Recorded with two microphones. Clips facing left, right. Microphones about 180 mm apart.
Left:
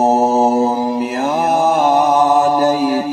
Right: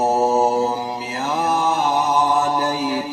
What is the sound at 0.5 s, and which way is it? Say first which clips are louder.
Mantra: left 6 dB; 55° left (ahead or behind).